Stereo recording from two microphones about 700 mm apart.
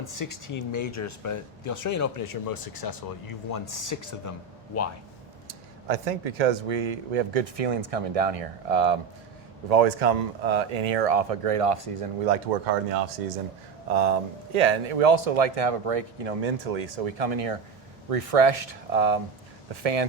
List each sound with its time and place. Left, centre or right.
0.1 s speech: left
5.5 s speech: right
12.6 s speech: right
13.9 s speech: right